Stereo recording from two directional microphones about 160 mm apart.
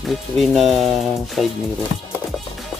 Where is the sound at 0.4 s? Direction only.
Centre (ahead or behind).